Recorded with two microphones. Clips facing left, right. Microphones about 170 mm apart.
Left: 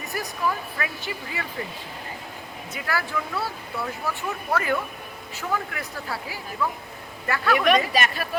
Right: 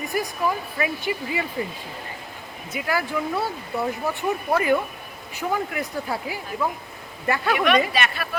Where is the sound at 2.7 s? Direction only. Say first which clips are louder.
Right 4 dB; 15° right (ahead or behind).